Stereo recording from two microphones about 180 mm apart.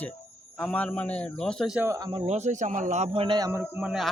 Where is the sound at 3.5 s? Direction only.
15° right (ahead or behind).